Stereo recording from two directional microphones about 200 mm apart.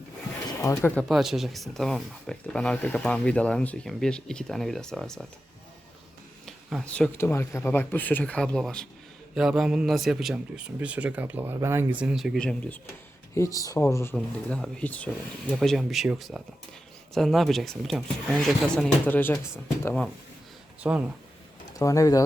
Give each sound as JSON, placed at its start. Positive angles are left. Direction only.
{"t": 0.4, "sound": "speech", "side_deg": 15}
{"t": 6.4, "sound": "speech", "side_deg": 0}
{"t": 20.8, "sound": "speech", "side_deg": -5}
{"t": 21.8, "sound": "speech", "side_deg": 15}